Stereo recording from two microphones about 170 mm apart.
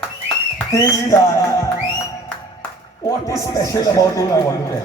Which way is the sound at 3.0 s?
20° left (ahead or behind).